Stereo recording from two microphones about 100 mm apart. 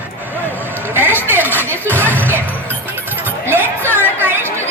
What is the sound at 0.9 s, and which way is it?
Speech, 20° right (ahead or behind).